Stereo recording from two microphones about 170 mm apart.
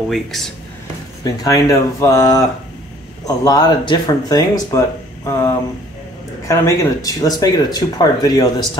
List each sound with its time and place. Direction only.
0.1 s speech: centre (ahead or behind)
1.2 s speech: 20° left (ahead or behind)